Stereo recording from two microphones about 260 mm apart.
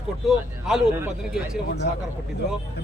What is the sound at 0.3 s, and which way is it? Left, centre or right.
Speech, centre.